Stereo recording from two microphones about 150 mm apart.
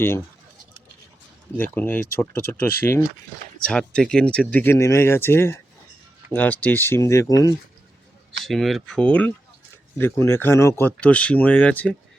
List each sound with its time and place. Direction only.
1.5 s speech: 15° left (ahead or behind)
8.4 s speech: centre (ahead or behind)